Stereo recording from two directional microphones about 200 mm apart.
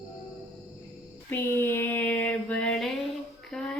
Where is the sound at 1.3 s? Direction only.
10° left (ahead or behind).